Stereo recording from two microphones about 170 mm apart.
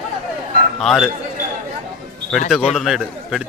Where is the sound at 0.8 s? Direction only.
Centre (ahead or behind).